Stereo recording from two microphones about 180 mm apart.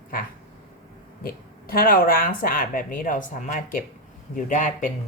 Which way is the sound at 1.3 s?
55° left (ahead or behind).